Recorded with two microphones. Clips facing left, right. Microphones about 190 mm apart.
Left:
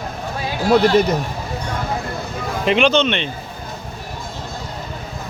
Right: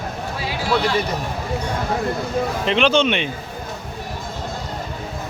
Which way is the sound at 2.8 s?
10° right (ahead or behind).